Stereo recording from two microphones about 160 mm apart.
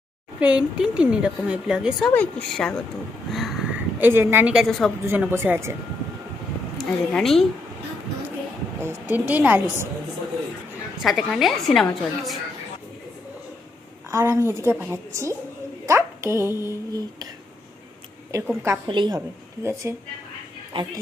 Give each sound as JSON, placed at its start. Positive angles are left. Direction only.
{"t": 0.3, "sound": "speech", "side_deg": -5}
{"t": 3.3, "sound": "a sound", "side_deg": 0}
{"t": 5.0, "sound": "speech", "side_deg": -15}
{"t": 6.7, "sound": "a woman's voice", "side_deg": 0}
{"t": 8.8, "sound": "speech", "side_deg": -10}
{"t": 11.0, "sound": "speech", "side_deg": 0}
{"t": 14.1, "sound": "speech", "side_deg": -15}
{"t": 18.3, "sound": "speech", "side_deg": -20}
{"t": 18.9, "sound": "a woman's voice", "side_deg": -30}
{"t": 19.6, "sound": "speech", "side_deg": -15}
{"t": 20.7, "sound": "speech", "side_deg": -35}